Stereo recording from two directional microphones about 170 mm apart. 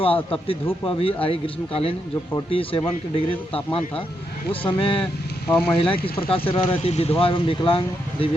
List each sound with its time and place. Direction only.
0.9 s speech: 35° left (ahead or behind)
5.5 s speech: 5° left (ahead or behind)
5.7 s speech: 30° left (ahead or behind)